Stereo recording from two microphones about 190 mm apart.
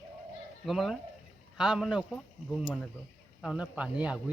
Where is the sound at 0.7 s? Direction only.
Centre (ahead or behind).